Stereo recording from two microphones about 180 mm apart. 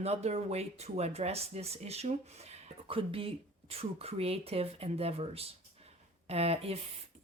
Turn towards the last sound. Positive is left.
turn(degrees=-35)  # may be behind; listen again after turning